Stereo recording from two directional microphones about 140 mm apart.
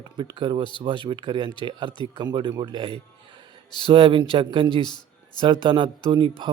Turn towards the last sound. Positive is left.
turn(degrees=-35)  # may be behind; listen again after turning